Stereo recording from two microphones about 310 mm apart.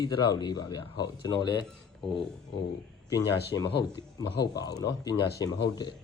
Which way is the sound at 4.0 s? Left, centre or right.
Centre.